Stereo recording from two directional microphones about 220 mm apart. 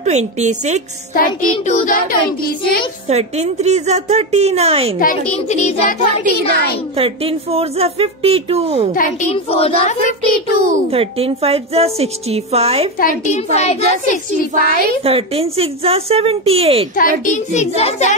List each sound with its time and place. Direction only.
0.0 s a woman's voice: 30° right (ahead or behind)
1.1 s a child's voice: 40° left (ahead or behind)
3.1 s a woman's voice: 30° right (ahead or behind)
4.9 s a child's voice: 35° left (ahead or behind)
7.0 s a woman's voice: 25° right (ahead or behind)
8.9 s a child's voice: 35° left (ahead or behind)
10.6 s a woman's voice: 25° right (ahead or behind)
13.2 s a child's voice: 30° left (ahead or behind)
15.0 s a woman's voice: 25° right (ahead or behind)
17.2 s a child's voice: 35° left (ahead or behind)